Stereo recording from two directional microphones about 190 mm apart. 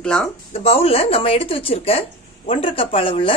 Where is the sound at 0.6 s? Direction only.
30° left (ahead or behind).